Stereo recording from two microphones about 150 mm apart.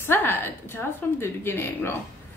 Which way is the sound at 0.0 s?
15° left (ahead or behind).